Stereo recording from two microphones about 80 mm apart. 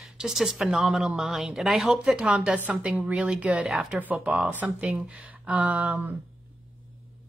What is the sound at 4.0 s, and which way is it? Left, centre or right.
A woman's voice, right.